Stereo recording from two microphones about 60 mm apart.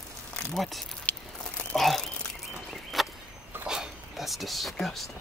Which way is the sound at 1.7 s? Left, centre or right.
Centre.